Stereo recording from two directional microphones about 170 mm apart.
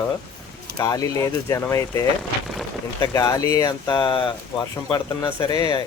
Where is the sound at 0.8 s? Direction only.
20° left (ahead or behind).